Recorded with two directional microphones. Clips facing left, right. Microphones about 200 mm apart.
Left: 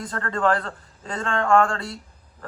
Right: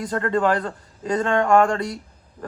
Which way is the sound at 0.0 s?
20° right (ahead or behind).